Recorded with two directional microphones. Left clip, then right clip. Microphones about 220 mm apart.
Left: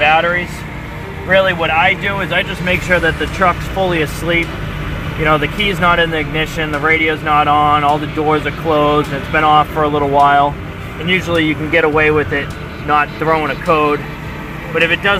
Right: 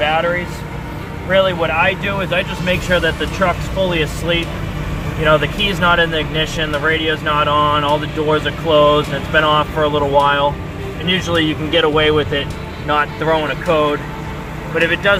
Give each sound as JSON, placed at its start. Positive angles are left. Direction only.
{"t": 0.1, "sound": "vehicle", "side_deg": 30}
{"t": 1.3, "sound": "speech", "side_deg": 30}